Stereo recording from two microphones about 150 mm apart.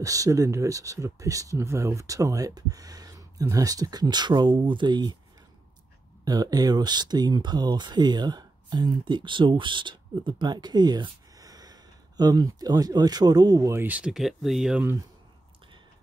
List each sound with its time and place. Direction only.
0.0 s speech: 20° right (ahead or behind)
6.2 s speech: 25° right (ahead or behind); by 14.8 s centre (ahead or behind)